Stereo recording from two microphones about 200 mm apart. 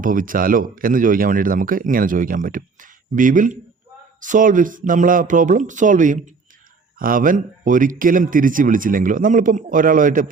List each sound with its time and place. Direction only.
0.0 s speech: 40° right (ahead or behind)